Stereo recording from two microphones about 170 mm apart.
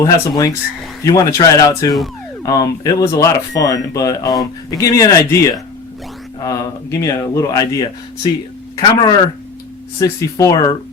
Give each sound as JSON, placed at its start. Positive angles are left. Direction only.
{"t": 0.0, "sound": "speech", "side_deg": 20}